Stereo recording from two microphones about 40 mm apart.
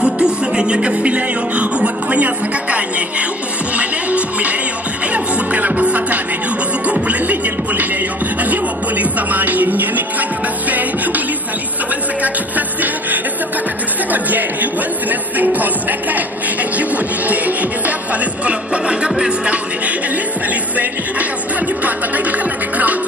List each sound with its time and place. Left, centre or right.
0.0 s music: right
14.1 s speech: right
16.7 s music: right